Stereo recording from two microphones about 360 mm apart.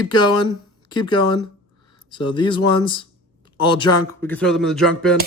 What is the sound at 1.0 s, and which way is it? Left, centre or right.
Speech, centre.